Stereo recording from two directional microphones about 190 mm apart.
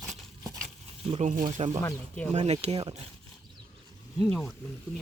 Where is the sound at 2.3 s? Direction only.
35° right (ahead or behind).